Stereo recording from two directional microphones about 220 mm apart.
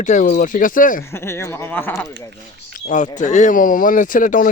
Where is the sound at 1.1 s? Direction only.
10° left (ahead or behind).